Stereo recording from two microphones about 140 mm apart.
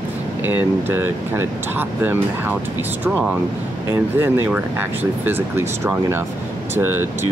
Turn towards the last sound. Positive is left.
turn(degrees=-15)  # may be behind; listen again after turning